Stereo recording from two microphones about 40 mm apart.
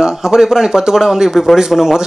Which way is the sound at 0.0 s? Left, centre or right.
Centre.